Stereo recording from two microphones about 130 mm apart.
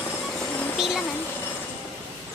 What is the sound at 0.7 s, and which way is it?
Speech, centre (ahead or behind).